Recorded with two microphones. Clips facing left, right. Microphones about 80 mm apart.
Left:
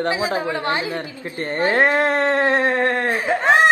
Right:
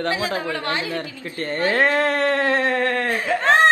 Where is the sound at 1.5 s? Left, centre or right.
Left.